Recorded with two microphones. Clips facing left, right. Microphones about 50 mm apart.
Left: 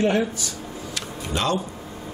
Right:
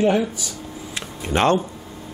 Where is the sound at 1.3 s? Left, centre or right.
Right.